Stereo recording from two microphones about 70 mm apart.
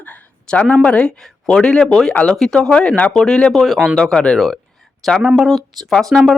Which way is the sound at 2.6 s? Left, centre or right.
Centre.